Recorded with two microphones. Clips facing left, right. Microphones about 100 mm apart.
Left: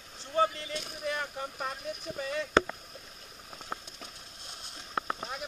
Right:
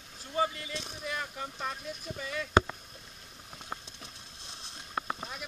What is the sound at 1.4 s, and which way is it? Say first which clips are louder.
Speech: left 1 dB; 15° left (ahead or behind).